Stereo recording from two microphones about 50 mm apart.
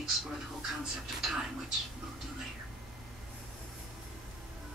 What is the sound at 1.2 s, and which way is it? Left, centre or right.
Speech, centre.